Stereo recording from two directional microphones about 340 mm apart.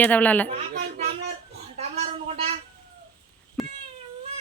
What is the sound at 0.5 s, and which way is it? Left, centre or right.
Speech, right.